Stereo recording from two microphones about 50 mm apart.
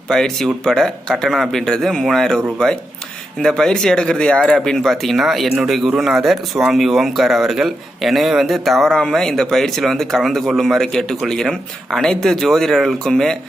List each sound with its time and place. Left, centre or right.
0.1 s a man's voice: centre